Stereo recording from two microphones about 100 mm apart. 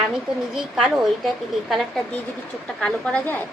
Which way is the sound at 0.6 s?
5° right (ahead or behind).